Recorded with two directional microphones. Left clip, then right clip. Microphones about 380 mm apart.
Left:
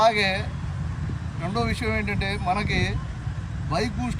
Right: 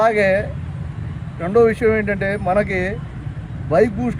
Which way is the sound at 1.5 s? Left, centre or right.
Centre.